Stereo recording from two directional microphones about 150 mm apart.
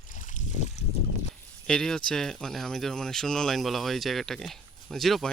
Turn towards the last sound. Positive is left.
turn(degrees=0)  # may be behind; listen again after turning